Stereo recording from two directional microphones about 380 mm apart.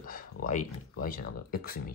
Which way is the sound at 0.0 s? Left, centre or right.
Left.